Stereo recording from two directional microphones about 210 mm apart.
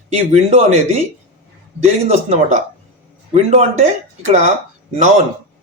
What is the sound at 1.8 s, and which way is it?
Speech, 30° right (ahead or behind).